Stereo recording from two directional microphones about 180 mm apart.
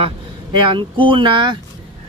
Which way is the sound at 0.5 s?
25° right (ahead or behind).